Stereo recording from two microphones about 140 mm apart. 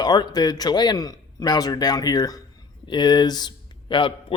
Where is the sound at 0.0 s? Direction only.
30° left (ahead or behind).